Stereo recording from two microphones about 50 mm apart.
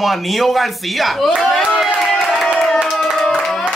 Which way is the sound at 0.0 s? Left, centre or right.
Centre.